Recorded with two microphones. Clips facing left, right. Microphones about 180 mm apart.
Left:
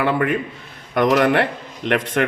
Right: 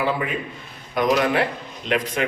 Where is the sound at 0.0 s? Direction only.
65° left (ahead or behind).